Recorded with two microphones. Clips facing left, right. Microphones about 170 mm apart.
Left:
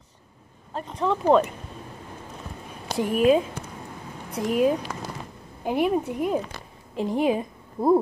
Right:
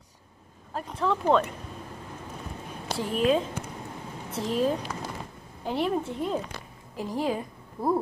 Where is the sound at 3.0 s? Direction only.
10° left (ahead or behind).